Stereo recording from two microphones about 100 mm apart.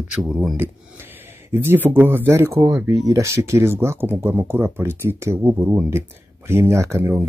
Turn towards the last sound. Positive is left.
turn(degrees=-20)  # may be behind; listen again after turning